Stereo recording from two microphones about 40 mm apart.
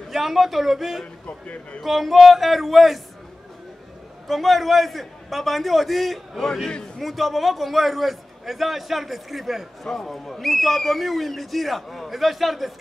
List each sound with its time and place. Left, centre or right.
0.1 s a man's voice: centre
1.2 s a man's voice: left
1.8 s a man's voice: centre
4.3 s a man's voice: centre
9.8 s a man's voice: centre